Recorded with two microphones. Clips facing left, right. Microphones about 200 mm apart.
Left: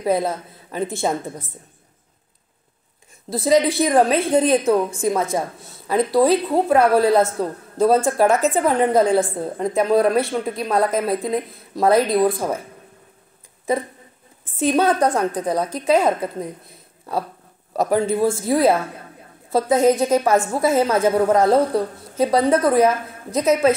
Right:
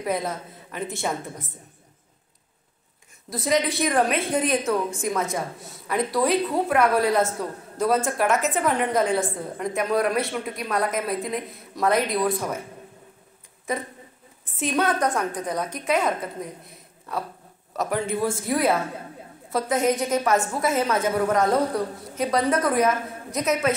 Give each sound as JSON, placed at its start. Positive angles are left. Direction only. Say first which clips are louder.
{"t": 0.0, "sound": "a woman's voice", "louder": "left 6 dB", "side_deg": 30}
{"t": 3.3, "sound": "a woman's voice", "louder": "left 7 dB", "side_deg": 30}
{"t": 13.7, "sound": "a woman's voice", "louder": "left 7 dB", "side_deg": 30}